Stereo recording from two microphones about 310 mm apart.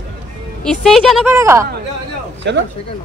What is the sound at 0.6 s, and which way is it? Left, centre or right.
A woman's voice, centre.